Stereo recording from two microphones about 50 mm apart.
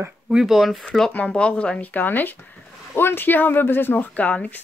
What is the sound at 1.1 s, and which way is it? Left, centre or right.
Speech, left.